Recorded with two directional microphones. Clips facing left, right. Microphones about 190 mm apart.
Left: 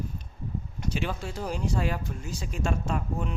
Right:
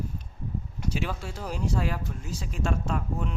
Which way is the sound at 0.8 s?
5° right (ahead or behind).